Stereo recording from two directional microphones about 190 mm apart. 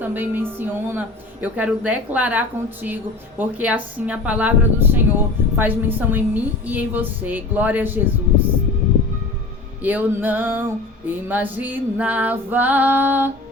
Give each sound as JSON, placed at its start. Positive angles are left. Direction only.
{"t": 0.0, "sound": "a woman's voice", "side_deg": -10}
{"t": 9.8, "sound": "a woman's voice", "side_deg": -10}